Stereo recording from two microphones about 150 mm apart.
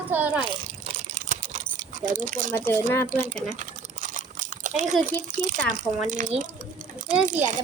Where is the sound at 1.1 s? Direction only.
55° right (ahead or behind).